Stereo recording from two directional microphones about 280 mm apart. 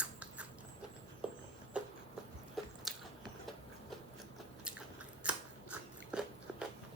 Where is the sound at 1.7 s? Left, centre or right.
Centre.